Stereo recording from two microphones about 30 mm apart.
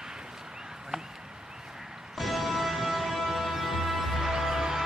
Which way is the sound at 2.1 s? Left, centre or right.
Centre.